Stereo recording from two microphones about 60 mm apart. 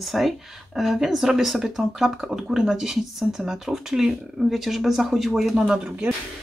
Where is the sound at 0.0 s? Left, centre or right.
Centre.